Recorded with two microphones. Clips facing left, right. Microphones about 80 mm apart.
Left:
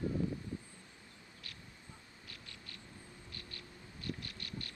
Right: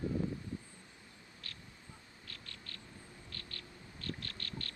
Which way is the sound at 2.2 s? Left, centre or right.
Centre.